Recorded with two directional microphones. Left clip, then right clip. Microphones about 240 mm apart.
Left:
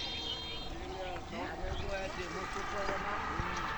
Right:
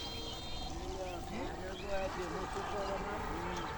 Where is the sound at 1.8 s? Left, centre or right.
Right.